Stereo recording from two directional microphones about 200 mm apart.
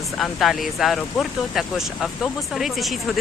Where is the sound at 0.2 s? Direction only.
Centre (ahead or behind).